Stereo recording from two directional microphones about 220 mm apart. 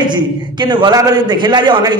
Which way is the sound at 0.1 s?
20° right (ahead or behind).